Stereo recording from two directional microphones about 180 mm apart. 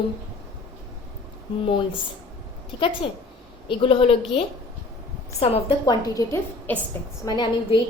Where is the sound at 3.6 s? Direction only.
30° left (ahead or behind).